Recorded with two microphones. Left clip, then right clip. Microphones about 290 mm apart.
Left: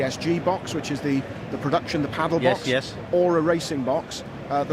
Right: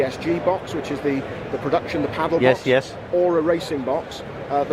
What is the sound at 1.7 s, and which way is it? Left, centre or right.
Speech, left.